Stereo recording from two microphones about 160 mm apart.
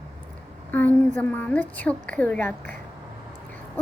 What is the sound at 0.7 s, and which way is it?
A woman's voice, 10° left (ahead or behind).